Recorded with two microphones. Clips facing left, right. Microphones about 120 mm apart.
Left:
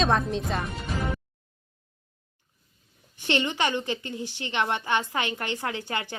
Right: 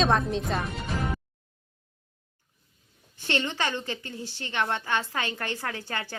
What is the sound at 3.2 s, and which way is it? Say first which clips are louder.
A woman's voice: left 3 dB; 15° left (ahead or behind).